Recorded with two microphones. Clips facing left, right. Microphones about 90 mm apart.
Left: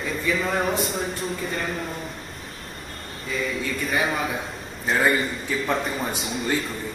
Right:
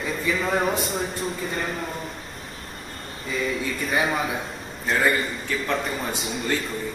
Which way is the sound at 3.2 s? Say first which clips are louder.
Right 1 dB; centre (ahead or behind).